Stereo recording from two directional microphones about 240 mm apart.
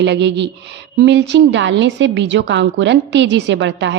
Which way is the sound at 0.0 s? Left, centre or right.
Right.